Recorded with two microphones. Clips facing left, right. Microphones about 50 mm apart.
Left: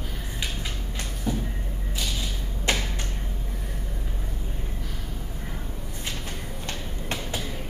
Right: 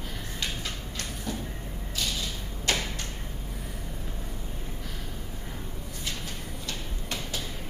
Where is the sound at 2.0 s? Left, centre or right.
Centre.